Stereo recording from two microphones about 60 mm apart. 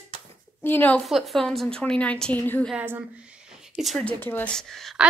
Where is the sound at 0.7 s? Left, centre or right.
Left.